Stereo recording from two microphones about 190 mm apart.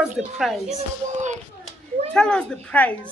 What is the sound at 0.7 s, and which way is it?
Speech, 40° right (ahead or behind).